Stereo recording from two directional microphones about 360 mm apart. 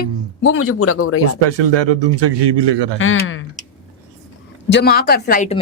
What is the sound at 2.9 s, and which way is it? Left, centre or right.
Speech, left.